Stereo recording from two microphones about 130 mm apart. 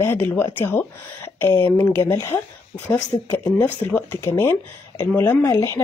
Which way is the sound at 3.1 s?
40° left (ahead or behind).